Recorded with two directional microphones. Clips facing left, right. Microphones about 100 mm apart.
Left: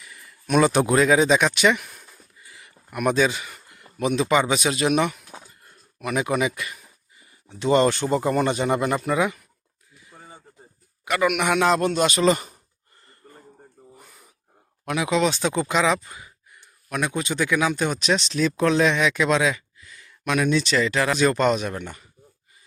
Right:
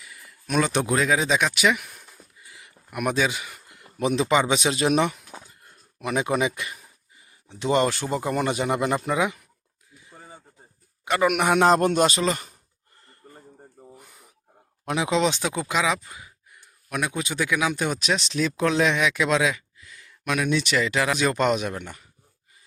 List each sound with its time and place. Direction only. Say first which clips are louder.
0.0 s speech: left 1 dB; centre (ahead or behind)
2.5 s a sound: left 1 dB; 15° right (ahead or behind)
3.9 s speech: left 1 dB; 25° right (ahead or behind)
4.6 s speech: even; 30° right (ahead or behind)
10.1 s a sound: even; centre (ahead or behind)
11.0 s a man's voice: even; 25° right (ahead or behind)
11.3 s speech: right 2 dB; 40° right (ahead or behind)
12.2 s speech: left 6 dB; 5° left (ahead or behind)
13.2 s a sound: right 1 dB; 20° right (ahead or behind)
14.8 s speech: left 1 dB; 25° right (ahead or behind)
15.4 s speech: left 3 dB; 5° right (ahead or behind)